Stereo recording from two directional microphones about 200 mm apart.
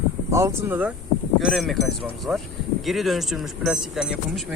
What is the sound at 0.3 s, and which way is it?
Speech, 15° right (ahead or behind).